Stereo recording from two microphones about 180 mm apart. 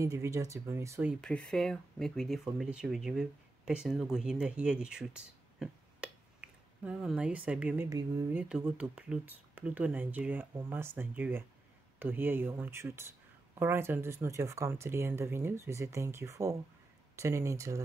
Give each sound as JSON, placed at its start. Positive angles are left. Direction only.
{"t": 0.0, "sound": "speech", "side_deg": -15}
{"t": 1.2, "sound": "speech", "side_deg": 5}